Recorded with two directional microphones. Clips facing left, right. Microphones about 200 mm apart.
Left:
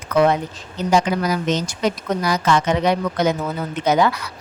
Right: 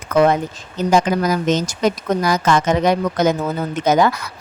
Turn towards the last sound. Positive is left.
turn(degrees=-45)  # may be behind; listen again after turning